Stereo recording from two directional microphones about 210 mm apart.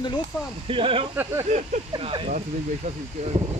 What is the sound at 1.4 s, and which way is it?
Speech, 35° right (ahead or behind).